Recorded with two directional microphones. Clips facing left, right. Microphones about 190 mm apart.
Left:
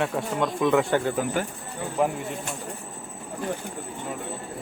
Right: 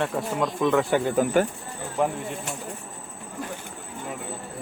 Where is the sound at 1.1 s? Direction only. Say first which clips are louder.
Right 5 dB; 50° right (ahead or behind).